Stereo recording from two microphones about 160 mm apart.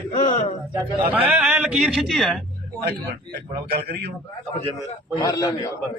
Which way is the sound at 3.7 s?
80° right.